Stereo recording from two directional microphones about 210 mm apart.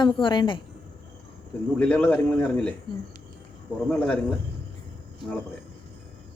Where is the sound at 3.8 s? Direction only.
5° left (ahead or behind).